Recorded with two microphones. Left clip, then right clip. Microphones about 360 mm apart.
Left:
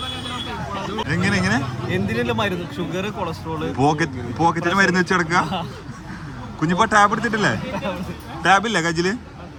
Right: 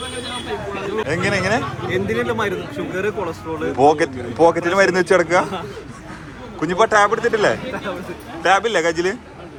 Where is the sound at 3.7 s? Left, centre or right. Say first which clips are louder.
Right 6 dB; centre.